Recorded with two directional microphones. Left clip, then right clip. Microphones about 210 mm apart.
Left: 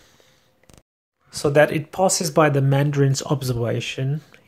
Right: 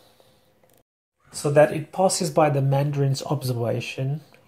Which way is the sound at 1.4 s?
40° left (ahead or behind).